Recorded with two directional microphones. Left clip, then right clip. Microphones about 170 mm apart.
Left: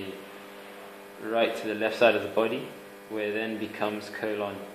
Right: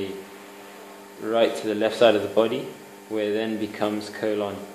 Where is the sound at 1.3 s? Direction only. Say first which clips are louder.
Right 5 dB; 40° right (ahead or behind).